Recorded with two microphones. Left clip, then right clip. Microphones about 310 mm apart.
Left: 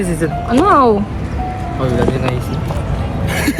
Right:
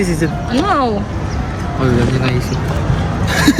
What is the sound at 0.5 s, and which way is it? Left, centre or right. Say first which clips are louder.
Speech: left 5 dB; centre.